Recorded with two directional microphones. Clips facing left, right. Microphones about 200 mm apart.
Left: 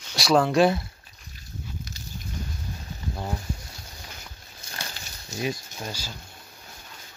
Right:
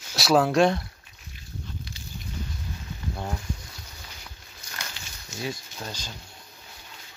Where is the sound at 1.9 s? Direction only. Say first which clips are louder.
Left 1 dB; 45° left (ahead or behind).